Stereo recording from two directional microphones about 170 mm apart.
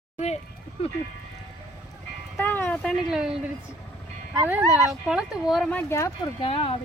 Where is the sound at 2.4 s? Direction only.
10° left (ahead or behind); by 3.5 s 5° right (ahead or behind).